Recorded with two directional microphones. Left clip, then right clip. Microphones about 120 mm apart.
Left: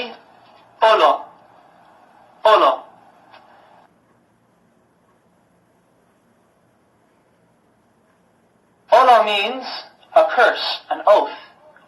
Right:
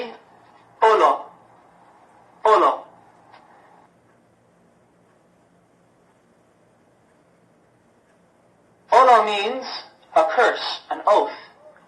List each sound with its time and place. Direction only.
0.0 s a sound: 40° left (ahead or behind)
2.4 s speech: 40° left (ahead or behind)
8.9 s a woman's voice: 45° left (ahead or behind)